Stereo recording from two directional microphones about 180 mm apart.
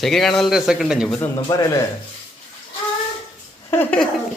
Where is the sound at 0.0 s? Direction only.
Centre (ahead or behind).